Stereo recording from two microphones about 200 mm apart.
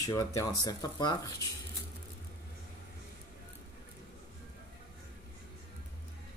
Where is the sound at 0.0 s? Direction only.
15° left (ahead or behind).